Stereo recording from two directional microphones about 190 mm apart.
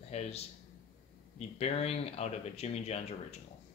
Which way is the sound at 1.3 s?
35° left (ahead or behind).